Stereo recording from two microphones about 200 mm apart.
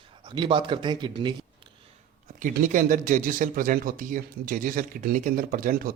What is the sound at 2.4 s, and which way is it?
Speech, 40° right (ahead or behind).